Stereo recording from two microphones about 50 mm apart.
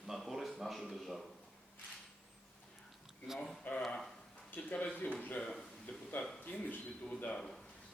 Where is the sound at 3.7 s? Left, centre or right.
Left.